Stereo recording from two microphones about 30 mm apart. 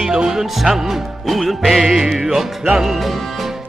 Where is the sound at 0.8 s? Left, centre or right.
Centre.